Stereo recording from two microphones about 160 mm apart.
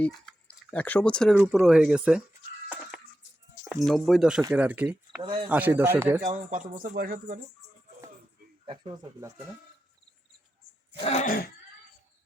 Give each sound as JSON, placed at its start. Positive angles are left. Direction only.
{"t": 0.0, "sound": "speech", "side_deg": 5}
{"t": 3.6, "sound": "speech", "side_deg": 0}
{"t": 6.2, "sound": "speech", "side_deg": -55}
{"t": 8.6, "sound": "speech", "side_deg": -30}
{"t": 11.0, "sound": "throat clearing", "side_deg": 50}